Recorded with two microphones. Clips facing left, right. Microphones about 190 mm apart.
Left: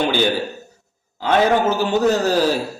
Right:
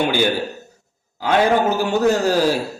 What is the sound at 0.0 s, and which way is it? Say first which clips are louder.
A man's voice: even; 10° right (ahead or behind).